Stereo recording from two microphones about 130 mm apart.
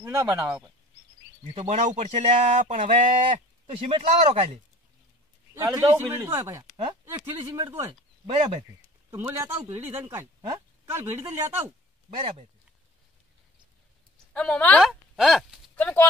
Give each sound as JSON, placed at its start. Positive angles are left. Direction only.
{"t": 0.0, "sound": "speech", "side_deg": -15}
{"t": 1.5, "sound": "speech", "side_deg": -60}
{"t": 3.8, "sound": "speech", "side_deg": -45}
{"t": 5.5, "sound": "a man's voice", "side_deg": -30}
{"t": 5.9, "sound": "speech", "side_deg": -20}
{"t": 8.3, "sound": "speech", "side_deg": -45}
{"t": 9.1, "sound": "speech", "side_deg": -15}
{"t": 14.3, "sound": "a woman's voice", "side_deg": 5}
{"t": 14.8, "sound": "speech", "side_deg": 0}
{"t": 15.7, "sound": "speech", "side_deg": 15}